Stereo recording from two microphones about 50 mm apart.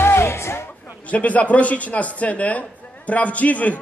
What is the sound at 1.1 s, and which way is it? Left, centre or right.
A man's voice, left.